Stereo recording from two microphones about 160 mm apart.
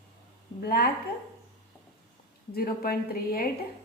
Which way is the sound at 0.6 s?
70° left (ahead or behind).